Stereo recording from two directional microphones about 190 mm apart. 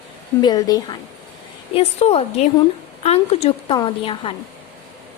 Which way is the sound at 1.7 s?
30° left (ahead or behind).